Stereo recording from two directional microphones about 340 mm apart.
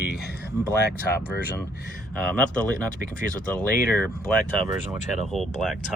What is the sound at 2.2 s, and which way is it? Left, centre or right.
Speech, centre.